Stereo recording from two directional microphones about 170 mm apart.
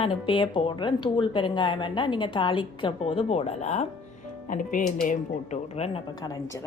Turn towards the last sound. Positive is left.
turn(degrees=20)  # may be behind; listen again after turning